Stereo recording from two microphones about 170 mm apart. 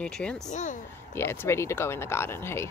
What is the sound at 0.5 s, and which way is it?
Speech, 45° left (ahead or behind).